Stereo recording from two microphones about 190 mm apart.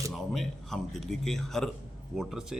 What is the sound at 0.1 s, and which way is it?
Speech, centre (ahead or behind).